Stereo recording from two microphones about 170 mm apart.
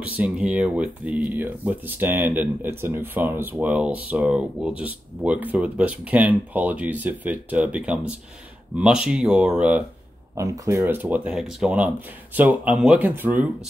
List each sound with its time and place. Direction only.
0.0 s speech: 10° right (ahead or behind)
10.3 s speech: 20° right (ahead or behind)